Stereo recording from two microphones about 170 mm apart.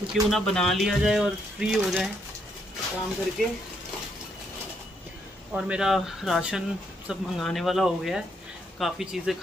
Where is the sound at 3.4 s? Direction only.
5° left (ahead or behind).